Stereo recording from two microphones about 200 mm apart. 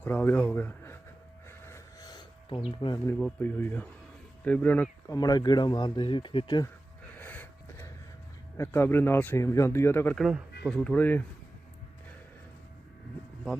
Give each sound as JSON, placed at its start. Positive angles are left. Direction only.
{"t": 0.0, "sound": "speech", "side_deg": 10}
{"t": 1.5, "sound": "a sound", "side_deg": 15}
{"t": 2.8, "sound": "speech", "side_deg": 20}
{"t": 3.2, "sound": "speech", "side_deg": 5}
{"t": 7.2, "sound": "a sound", "side_deg": 10}
{"t": 8.5, "sound": "speech", "side_deg": 15}